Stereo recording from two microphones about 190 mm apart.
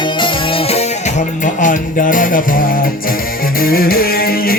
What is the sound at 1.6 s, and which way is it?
Music, 45° left (ahead or behind).